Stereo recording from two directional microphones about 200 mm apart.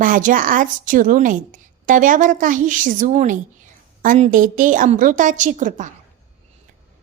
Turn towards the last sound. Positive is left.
turn(degrees=-40)  # may be behind; listen again after turning